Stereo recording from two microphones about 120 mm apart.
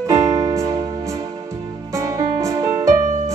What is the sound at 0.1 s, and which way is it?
Music, 30° right (ahead or behind).